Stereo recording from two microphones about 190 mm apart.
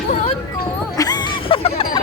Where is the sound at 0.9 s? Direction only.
20° left (ahead or behind).